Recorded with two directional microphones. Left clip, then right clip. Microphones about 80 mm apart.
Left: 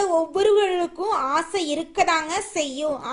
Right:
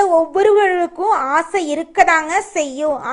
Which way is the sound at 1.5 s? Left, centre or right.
Left.